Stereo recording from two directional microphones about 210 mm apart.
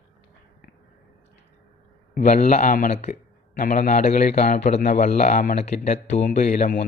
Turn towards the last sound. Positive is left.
turn(degrees=40)  # may be behind; listen again after turning